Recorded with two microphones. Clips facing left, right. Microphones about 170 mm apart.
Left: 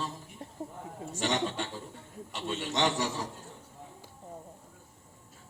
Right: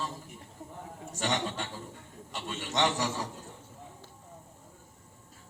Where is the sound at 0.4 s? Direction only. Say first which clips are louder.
Left 7 dB; 40° left (ahead or behind).